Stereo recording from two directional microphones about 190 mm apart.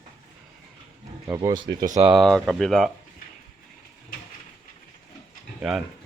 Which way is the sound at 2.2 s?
Centre (ahead or behind).